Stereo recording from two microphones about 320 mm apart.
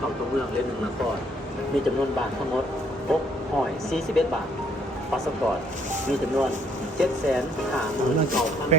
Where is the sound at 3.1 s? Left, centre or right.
Centre.